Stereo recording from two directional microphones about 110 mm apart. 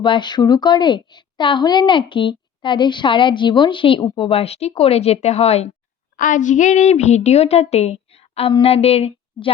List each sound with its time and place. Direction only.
0.0 s a woman's voice: 45° left (ahead or behind)
4.2 s speech: 60° left (ahead or behind)
6.6 s a woman's voice: 90° left; by 9.5 s 65° left (ahead or behind)